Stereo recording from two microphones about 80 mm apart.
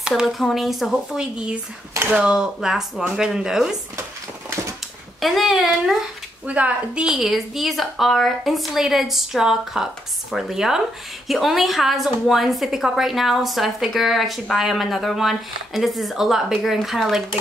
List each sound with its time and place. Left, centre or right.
0.2 s a woman's voice: centre
1.2 s speech: centre
5.2 s a woman's voice: centre
6.4 s speech: centre
7.1 s a woman's voice: centre